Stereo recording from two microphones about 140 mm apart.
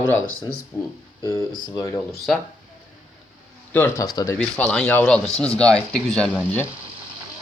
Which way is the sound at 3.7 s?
15° left (ahead or behind).